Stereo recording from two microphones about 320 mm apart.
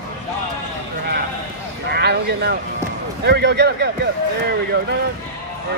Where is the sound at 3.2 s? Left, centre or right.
Right.